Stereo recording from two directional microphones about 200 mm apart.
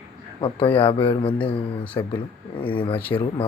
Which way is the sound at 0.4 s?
25° left (ahead or behind).